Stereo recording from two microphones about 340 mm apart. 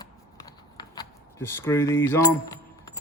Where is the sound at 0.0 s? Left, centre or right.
Centre.